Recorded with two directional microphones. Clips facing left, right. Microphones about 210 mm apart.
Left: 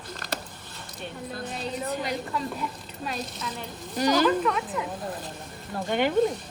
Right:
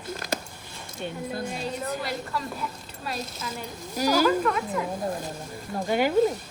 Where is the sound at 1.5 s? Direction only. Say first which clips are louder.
Even; centre (ahead or behind).